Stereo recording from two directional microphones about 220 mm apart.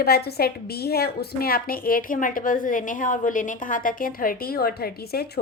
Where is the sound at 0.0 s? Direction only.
45° left (ahead or behind).